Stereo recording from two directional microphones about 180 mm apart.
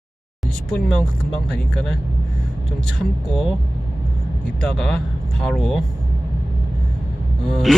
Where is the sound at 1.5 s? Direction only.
5° left (ahead or behind).